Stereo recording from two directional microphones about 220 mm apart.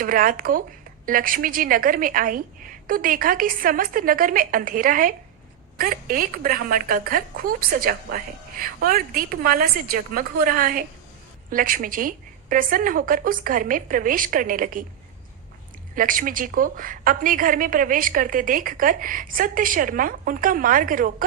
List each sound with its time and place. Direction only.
0.0 s a woman's voice: 40° right (ahead or behind)
16.0 s a woman's voice: 40° right (ahead or behind)